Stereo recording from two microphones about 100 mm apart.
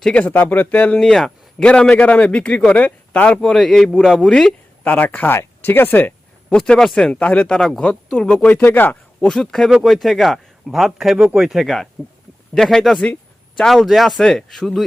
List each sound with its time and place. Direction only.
0.0 s speech: 15° left (ahead or behind)
6.6 s a man's voice: 5° left (ahead or behind)
9.2 s a man's voice: 5° left (ahead or behind)